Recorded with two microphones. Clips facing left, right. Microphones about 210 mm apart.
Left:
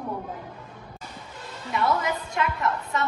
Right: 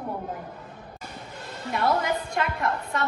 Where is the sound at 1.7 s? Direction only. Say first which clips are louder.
Right 1 dB; 55° right (ahead or behind).